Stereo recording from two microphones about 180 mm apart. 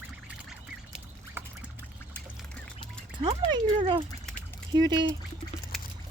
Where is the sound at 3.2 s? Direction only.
25° right (ahead or behind).